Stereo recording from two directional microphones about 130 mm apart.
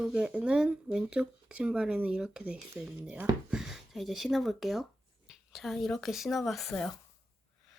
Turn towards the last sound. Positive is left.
turn(degrees=0)  # may be behind; listen again after turning